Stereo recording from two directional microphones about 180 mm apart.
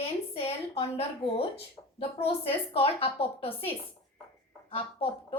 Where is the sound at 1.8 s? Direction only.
15° left (ahead or behind).